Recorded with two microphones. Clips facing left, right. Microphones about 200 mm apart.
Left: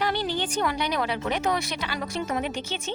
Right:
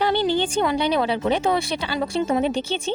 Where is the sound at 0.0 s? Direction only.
25° right (ahead or behind).